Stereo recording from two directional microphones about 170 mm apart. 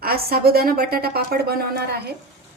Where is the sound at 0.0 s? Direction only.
65° right (ahead or behind).